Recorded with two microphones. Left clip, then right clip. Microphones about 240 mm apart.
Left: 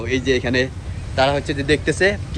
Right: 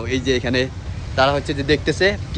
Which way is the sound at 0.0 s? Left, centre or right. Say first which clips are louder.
Left 1 dB; right.